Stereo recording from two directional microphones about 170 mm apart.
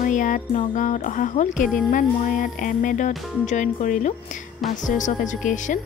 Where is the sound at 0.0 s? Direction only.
50° left (ahead or behind).